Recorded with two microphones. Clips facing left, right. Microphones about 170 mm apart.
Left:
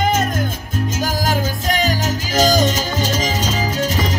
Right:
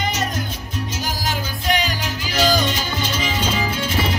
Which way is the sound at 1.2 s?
45° left (ahead or behind).